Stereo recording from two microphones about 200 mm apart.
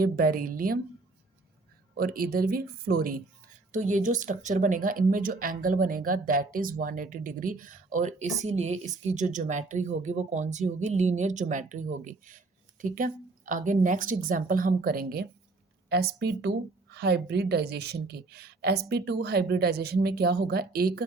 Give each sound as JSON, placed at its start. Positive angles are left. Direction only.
{"t": 0.0, "sound": "a woman's voice", "side_deg": -45}
{"t": 2.0, "sound": "a woman's voice", "side_deg": -45}